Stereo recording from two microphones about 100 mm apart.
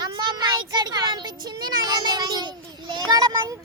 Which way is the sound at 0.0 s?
45° right (ahead or behind).